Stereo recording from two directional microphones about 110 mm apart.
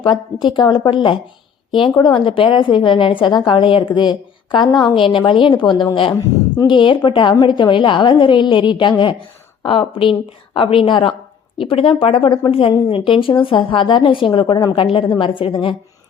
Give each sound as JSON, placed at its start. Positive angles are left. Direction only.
{"t": 0.0, "sound": "a woman's voice", "side_deg": 45}